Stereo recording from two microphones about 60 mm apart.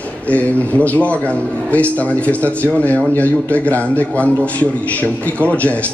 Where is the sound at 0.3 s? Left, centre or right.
Left.